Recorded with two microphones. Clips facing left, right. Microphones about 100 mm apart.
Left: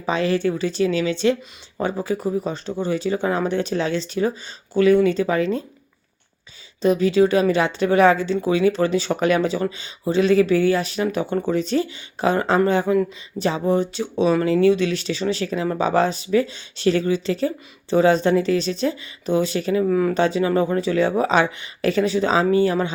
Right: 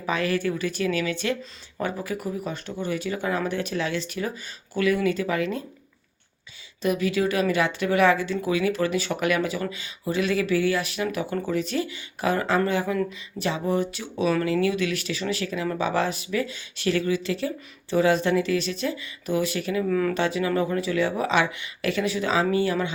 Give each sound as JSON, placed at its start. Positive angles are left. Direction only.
{"t": 0.0, "sound": "speech", "side_deg": 25}
{"t": 6.8, "sound": "speech", "side_deg": 30}